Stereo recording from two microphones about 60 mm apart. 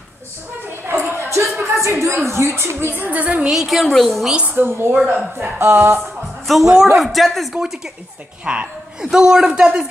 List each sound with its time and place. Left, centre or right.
0.8 s a sound: right
1.6 s a woman's voice: right
3.3 s a man's voice: centre
3.6 s speech: centre
4.5 s a woman's voice: right
5.6 s speech: right
6.4 s a man's voice: centre
6.7 s a man's voice: centre
7.0 s a man's voice: centre